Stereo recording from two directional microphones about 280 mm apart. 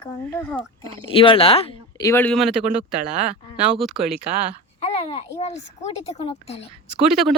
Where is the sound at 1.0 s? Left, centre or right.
Centre.